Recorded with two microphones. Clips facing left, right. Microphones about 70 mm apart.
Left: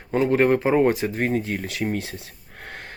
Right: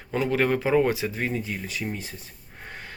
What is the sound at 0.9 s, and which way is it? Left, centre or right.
Speech, left.